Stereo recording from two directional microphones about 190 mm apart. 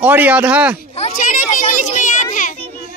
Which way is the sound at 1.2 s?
45° left (ahead or behind).